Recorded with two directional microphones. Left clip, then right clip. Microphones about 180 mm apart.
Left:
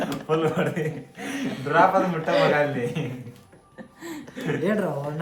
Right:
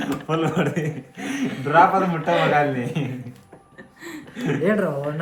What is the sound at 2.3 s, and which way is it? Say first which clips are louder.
Speech: right 1 dB; 50° left (ahead or behind).